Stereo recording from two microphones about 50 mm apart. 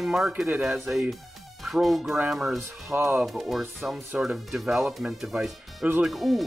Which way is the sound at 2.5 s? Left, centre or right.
Right.